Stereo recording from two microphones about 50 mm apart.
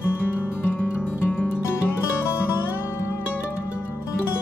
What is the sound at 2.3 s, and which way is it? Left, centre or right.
Music, left.